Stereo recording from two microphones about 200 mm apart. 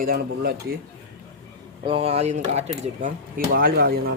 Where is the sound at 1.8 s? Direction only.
30° right (ahead or behind); by 4.1 s 50° right (ahead or behind).